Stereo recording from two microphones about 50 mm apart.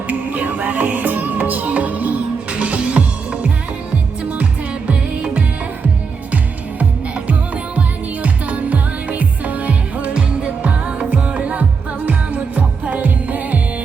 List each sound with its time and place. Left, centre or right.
0.1 s music: right
4.9 s music: right
7.3 s music: right